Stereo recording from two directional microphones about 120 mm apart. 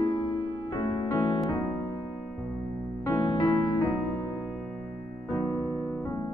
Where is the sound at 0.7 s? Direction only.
45° left (ahead or behind).